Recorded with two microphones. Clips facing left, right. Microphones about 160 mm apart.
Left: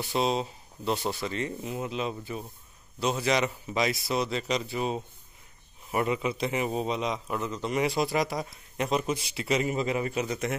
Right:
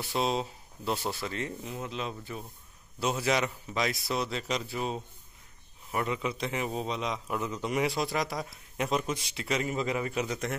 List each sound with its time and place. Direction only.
0.0 s a man's voice: centre (ahead or behind)
9.8 s a man's voice: 25° left (ahead or behind)
10.1 s a man's voice: centre (ahead or behind)